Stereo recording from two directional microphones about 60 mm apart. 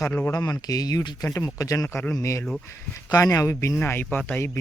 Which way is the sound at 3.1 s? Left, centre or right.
Left.